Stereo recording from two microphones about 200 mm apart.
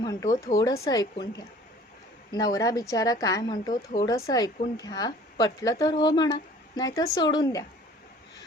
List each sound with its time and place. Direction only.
0.0 s speech: 15° left (ahead or behind)
2.3 s a woman's voice: 20° left (ahead or behind)